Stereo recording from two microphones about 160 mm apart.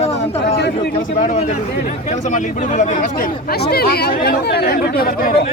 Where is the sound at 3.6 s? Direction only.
80° left.